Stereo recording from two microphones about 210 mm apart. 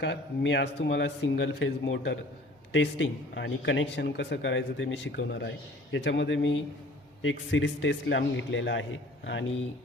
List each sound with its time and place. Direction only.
0.0 s speech: 55° left (ahead or behind)